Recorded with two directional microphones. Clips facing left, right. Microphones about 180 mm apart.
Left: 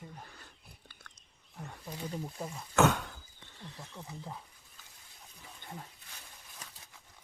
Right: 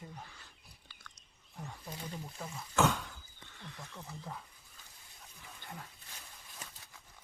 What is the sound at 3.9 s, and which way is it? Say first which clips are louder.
Speech: left 2 dB; 15° left (ahead or behind).